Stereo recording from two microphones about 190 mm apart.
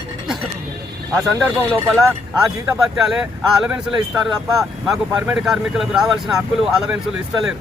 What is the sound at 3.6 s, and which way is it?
Speech, 5° right (ahead or behind).